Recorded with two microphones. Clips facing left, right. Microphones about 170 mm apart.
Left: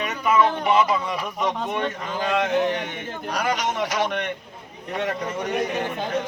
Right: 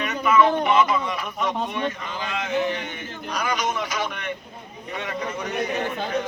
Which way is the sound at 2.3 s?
65° left (ahead or behind).